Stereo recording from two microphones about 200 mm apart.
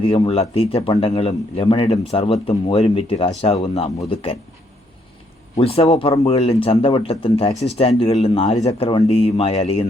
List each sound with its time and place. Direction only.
0.0 s a man's voice: 25° left (ahead or behind)
5.5 s a man's voice: 30° left (ahead or behind)